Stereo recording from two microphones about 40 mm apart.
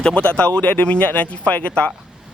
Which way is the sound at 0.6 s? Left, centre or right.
Left.